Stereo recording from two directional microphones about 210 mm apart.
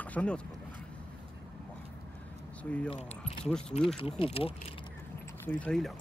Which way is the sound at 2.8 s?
30° left (ahead or behind).